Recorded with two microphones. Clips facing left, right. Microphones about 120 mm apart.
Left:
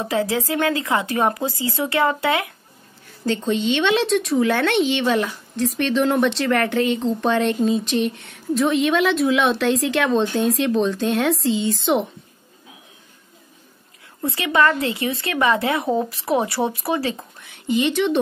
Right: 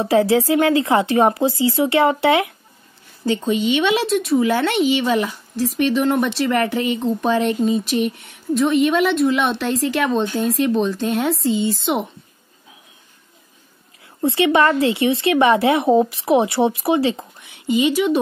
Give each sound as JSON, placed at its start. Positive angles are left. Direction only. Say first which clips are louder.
{"t": 0.0, "sound": "speech", "louder": "right 6 dB", "side_deg": -30}
{"t": 3.3, "sound": "a woman's voice", "louder": "right 2 dB", "side_deg": -10}
{"t": 14.2, "sound": "speech", "louder": "right 4 dB", "side_deg": -25}
{"t": 17.8, "sound": "a woman's voice", "louder": "right 2 dB", "side_deg": -5}